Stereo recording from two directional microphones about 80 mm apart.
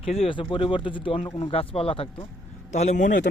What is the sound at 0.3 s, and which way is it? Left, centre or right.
Speech, left.